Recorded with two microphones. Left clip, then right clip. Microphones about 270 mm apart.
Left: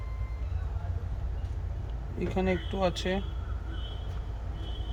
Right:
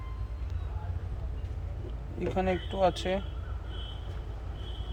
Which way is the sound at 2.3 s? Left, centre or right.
Centre.